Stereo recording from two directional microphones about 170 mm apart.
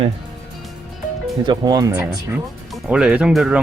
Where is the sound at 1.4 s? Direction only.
25° right (ahead or behind).